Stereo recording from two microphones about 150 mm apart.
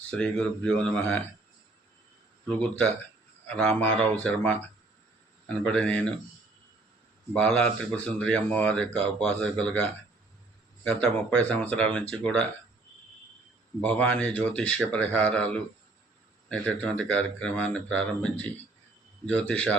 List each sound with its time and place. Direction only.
0.1 s speech: 5° left (ahead or behind)
2.5 s speech: 10° left (ahead or behind)
7.3 s speech: 10° left (ahead or behind)
10.8 s speech: 10° left (ahead or behind)
13.8 s speech: 10° left (ahead or behind)